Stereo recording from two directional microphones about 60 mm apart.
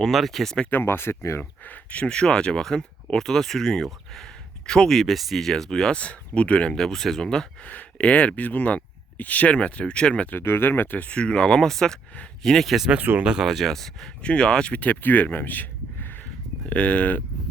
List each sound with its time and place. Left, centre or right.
0.0 s speech: centre
0.7 s speech: left
1.4 s speech: left
2.0 s speech: centre
6.0 s speech: left
6.7 s speech: centre
10.2 s speech: left; by 14.1 s centre
14.2 s speech: centre; by 16.2 s left
16.6 s speech: left